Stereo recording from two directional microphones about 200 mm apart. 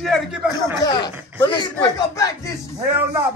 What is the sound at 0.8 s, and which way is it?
Speech, 20° left (ahead or behind).